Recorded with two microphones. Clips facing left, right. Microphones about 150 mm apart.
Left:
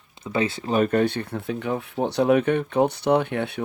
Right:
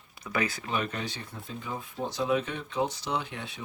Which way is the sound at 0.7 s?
50° left (ahead or behind).